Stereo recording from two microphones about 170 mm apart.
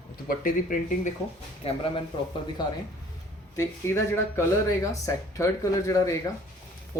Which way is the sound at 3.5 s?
15° left (ahead or behind).